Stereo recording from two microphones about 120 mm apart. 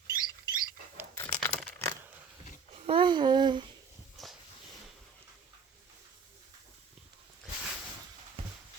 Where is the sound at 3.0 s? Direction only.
40° right (ahead or behind).